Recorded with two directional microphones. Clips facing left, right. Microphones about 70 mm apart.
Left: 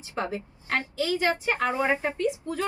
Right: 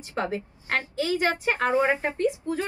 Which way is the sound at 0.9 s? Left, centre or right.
Right.